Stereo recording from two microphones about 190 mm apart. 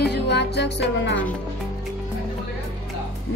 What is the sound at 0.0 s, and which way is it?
Music, 60° left (ahead or behind).